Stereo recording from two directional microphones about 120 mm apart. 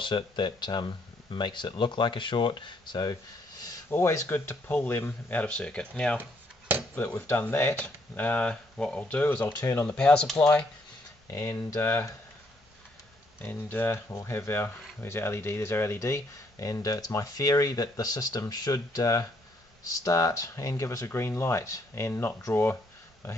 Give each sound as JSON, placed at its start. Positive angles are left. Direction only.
{"t": 0.0, "sound": "speech", "side_deg": 40}
{"t": 3.9, "sound": "speech", "side_deg": 20}
{"t": 11.2, "sound": "speech", "side_deg": 25}
{"t": 13.4, "sound": "speech", "side_deg": 15}